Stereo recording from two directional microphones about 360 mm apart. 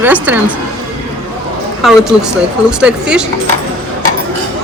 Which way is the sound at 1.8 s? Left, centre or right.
Centre.